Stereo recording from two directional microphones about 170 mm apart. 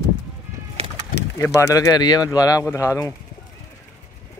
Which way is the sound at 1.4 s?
20° left (ahead or behind).